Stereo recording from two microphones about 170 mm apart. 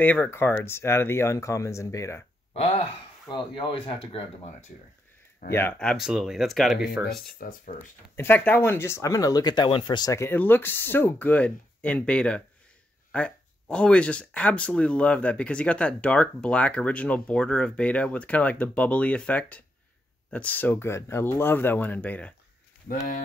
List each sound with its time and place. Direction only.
0.0 s speech: 10° left (ahead or behind)
2.5 s speech: 35° left (ahead or behind)
5.5 s speech: 10° left (ahead or behind)
7.3 s speech: 55° left (ahead or behind)
8.2 s speech: 10° left (ahead or behind)